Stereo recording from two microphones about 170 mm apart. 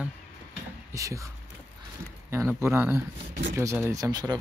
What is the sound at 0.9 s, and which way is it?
Speech, 20° right (ahead or behind).